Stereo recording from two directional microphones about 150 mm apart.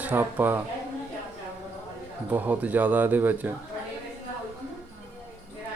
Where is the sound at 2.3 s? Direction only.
10° right (ahead or behind).